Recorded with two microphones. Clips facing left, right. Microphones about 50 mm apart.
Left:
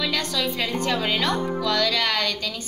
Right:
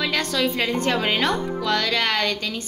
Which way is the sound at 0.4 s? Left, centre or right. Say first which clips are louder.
Right 4 dB; right.